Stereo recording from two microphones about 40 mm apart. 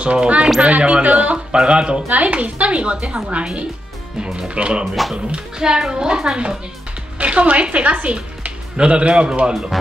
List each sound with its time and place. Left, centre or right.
0.0 s speech: right
2.0 s speech: right
4.4 s a woman's voice: right
7.2 s speech: right
9.5 s speech: centre